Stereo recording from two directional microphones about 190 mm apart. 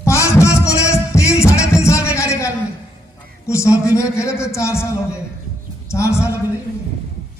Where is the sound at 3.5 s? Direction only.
15° left (ahead or behind).